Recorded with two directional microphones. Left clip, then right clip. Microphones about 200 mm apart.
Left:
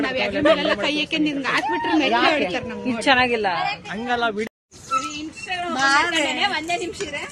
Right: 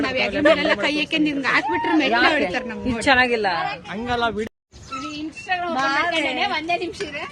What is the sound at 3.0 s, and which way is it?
Speech, centre (ahead or behind).